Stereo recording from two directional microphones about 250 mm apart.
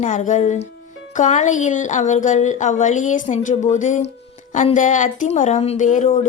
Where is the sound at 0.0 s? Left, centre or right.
Left.